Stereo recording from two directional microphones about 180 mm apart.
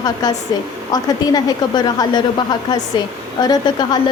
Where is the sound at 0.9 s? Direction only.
20° left (ahead or behind).